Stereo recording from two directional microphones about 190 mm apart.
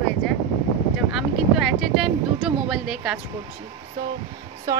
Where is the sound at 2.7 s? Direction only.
5° right (ahead or behind).